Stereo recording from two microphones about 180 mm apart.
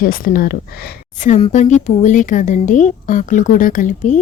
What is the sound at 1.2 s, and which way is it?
Speech, 40° left (ahead or behind).